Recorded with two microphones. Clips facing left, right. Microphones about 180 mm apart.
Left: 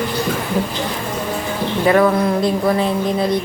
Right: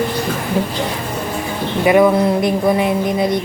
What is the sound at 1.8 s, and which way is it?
A woman's voice, 15° right (ahead or behind).